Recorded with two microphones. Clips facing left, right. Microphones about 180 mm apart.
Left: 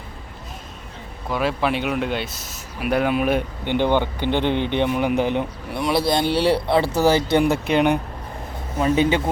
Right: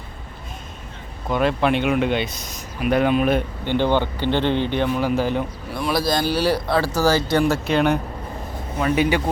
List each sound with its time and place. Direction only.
1.3 s speech: 5° left (ahead or behind)
8.8 s a man's voice: 25° left (ahead or behind)